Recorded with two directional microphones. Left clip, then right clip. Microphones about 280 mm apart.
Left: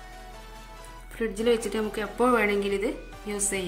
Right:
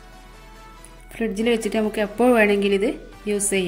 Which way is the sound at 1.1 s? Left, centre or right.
Centre.